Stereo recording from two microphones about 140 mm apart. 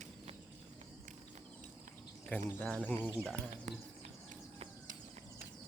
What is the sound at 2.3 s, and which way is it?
Speech, 15° left (ahead or behind).